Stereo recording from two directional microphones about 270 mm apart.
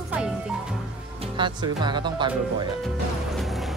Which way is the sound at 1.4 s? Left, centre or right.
Centre.